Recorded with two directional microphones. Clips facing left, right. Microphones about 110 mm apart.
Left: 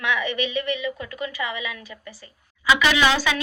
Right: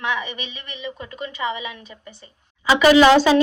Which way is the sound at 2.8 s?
40° right (ahead or behind).